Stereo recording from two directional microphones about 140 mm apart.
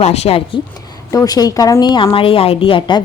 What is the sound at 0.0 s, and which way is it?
Speech, 50° left (ahead or behind).